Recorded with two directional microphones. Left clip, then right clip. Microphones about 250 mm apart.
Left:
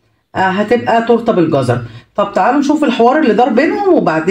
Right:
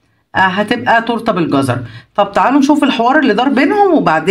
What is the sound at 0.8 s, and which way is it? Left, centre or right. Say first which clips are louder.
Speech: right 1 dB; right.